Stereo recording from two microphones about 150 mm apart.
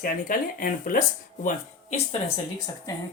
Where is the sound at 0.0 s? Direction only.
65° left (ahead or behind).